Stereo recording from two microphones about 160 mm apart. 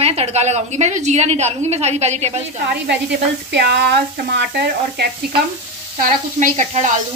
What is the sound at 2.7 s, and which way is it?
Speech, 90° right.